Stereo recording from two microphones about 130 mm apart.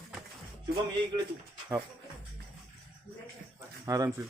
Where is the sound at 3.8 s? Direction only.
25° right (ahead or behind).